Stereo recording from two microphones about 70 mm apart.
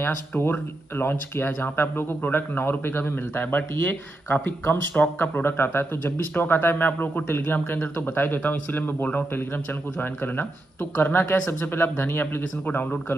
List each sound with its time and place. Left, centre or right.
0.0 s speech: left